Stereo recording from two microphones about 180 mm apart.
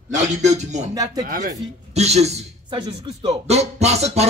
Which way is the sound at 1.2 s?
50° right (ahead or behind).